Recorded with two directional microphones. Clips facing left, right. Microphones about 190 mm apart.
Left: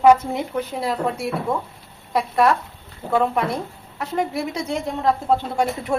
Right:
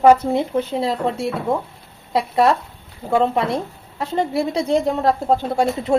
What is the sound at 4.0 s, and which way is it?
A woman's voice, 30° right (ahead or behind).